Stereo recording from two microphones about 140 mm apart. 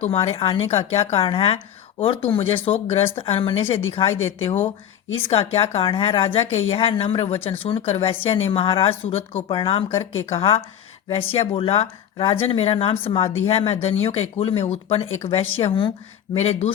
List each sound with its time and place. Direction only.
0.0 s speech: 45° left (ahead or behind)
5.2 s speech: 45° left (ahead or behind)
9.9 s speech: 20° left (ahead or behind)
10.3 s speech: 40° left (ahead or behind)
16.4 s speech: 50° left (ahead or behind)